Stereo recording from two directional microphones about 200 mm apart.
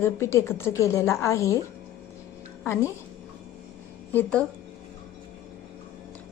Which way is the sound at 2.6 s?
10° left (ahead or behind).